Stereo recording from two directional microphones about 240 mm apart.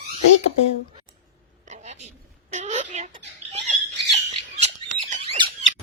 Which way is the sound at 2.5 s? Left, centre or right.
Right.